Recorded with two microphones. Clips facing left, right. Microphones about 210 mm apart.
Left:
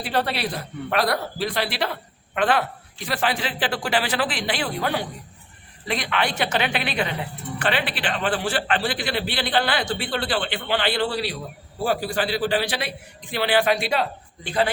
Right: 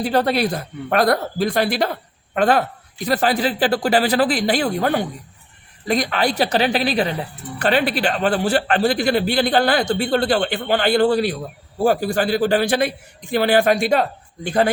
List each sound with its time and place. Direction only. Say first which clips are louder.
0.0 s speech: right 7 dB; 45° right (ahead or behind)